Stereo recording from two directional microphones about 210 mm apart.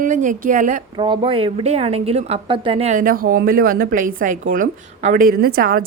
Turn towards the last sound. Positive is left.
turn(degrees=-45)  # may be behind; listen again after turning